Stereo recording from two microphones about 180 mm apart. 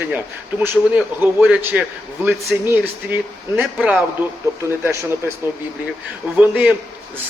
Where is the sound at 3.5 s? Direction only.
Centre (ahead or behind).